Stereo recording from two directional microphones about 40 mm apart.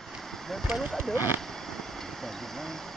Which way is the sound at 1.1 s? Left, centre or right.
Right.